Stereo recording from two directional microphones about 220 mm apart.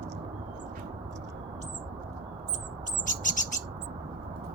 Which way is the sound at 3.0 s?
35° left (ahead or behind).